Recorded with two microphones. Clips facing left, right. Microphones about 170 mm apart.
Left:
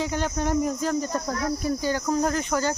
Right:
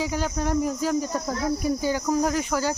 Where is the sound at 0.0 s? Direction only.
5° right (ahead or behind).